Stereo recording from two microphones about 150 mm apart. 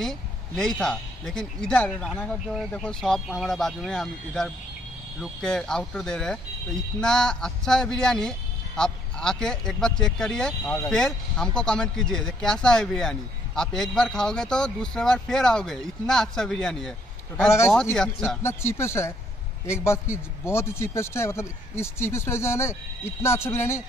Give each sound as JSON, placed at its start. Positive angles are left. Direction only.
{"t": 0.0, "sound": "speech", "side_deg": 5}
{"t": 10.6, "sound": "speech", "side_deg": 20}
{"t": 10.9, "sound": "speech", "side_deg": 5}
{"t": 17.9, "sound": "speech", "side_deg": 5}
{"t": 18.4, "sound": "a man's voice", "side_deg": 15}